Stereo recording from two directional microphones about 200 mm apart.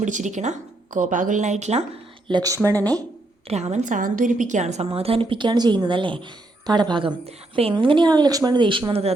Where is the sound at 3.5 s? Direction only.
35° right (ahead or behind).